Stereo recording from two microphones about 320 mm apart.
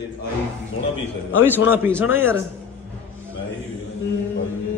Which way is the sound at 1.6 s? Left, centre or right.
Centre.